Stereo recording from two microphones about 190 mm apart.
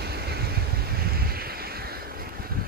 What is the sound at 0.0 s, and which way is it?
Vehicle, 55° right (ahead or behind).